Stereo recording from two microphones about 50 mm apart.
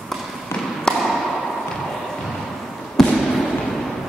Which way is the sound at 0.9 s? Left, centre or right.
Centre.